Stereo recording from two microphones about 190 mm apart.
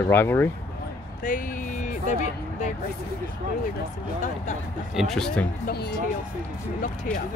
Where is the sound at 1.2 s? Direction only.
45° left (ahead or behind).